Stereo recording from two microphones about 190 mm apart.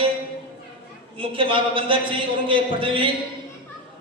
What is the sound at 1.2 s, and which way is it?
A woman's voice, 25° right (ahead or behind).